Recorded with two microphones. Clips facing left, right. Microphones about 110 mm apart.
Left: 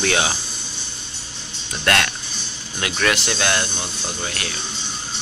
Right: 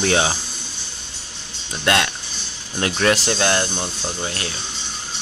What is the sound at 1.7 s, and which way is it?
Speech, 20° right (ahead or behind).